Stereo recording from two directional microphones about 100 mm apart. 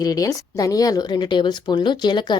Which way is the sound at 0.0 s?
35° left (ahead or behind).